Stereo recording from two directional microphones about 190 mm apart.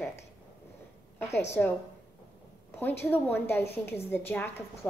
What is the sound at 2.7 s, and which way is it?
A woman's voice, 10° left (ahead or behind).